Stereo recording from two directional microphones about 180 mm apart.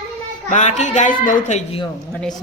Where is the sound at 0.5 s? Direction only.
40° left (ahead or behind).